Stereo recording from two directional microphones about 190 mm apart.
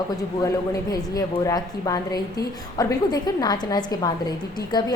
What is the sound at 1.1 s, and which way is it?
A woman's voice, 20° left (ahead or behind).